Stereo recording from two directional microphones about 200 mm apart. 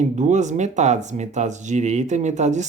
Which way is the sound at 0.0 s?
35° right (ahead or behind).